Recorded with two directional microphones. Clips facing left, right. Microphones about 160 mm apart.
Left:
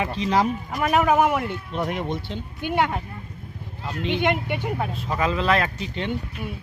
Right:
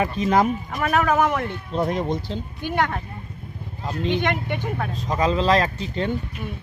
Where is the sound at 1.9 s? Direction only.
35° right (ahead or behind).